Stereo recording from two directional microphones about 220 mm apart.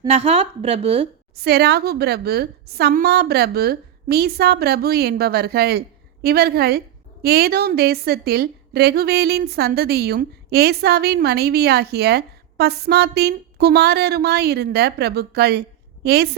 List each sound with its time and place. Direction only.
0.1 s a woman's voice: 30° right (ahead or behind)
1.4 s a woman's voice: 45° right (ahead or behind)